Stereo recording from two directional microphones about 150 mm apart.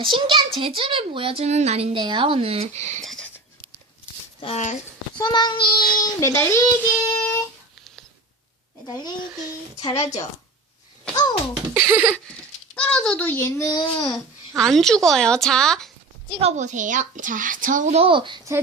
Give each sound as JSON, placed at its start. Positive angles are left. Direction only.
{"t": 0.0, "sound": "a woman's voice", "side_deg": -35}
{"t": 3.0, "sound": "a sound", "side_deg": 0}
{"t": 4.4, "sound": "speech", "side_deg": 40}
{"t": 5.1, "sound": "speech", "side_deg": 30}
{"t": 6.1, "sound": "speech", "side_deg": 20}
{"t": 9.9, "sound": "a woman's voice", "side_deg": 45}
{"t": 11.1, "sound": "a sound", "side_deg": 25}
{"t": 11.7, "sound": "a sound", "side_deg": -15}
{"t": 12.7, "sound": "speech", "side_deg": 5}
{"t": 13.9, "sound": "babbling", "side_deg": 30}
{"t": 14.6, "sound": "a woman's voice", "side_deg": 5}
{"t": 16.4, "sound": "a woman's voice", "side_deg": -50}
{"t": 17.9, "sound": "a woman's voice", "side_deg": -35}